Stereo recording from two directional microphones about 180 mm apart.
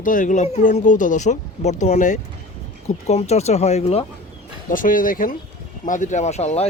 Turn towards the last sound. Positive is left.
turn(degrees=40)  # may be behind; listen again after turning